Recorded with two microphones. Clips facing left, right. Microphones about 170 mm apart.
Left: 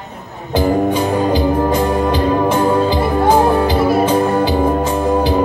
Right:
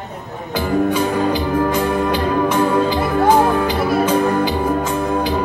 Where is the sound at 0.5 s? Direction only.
30° left (ahead or behind).